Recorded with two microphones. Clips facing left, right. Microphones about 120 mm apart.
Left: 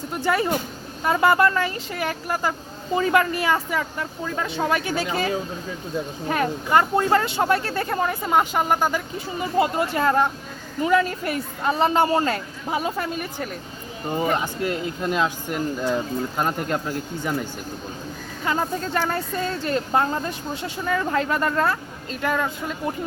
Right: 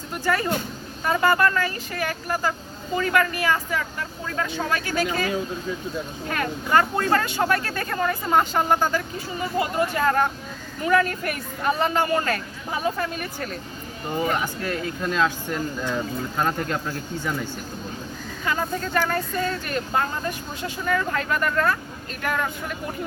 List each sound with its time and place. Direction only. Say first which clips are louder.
0.1 s speech: left 2 dB; 20° left (ahead or behind)
18.4 s speech: left 2 dB; 30° left (ahead or behind)